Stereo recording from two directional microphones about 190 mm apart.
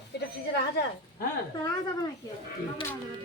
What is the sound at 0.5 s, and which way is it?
Speech, 55° left (ahead or behind).